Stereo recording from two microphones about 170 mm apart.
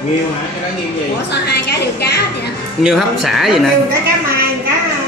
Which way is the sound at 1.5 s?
70° left (ahead or behind).